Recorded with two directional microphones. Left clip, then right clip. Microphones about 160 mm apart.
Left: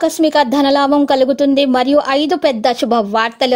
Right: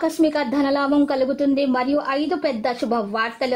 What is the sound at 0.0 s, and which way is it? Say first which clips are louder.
A woman's voice: left 7 dB; 25° left (ahead or behind).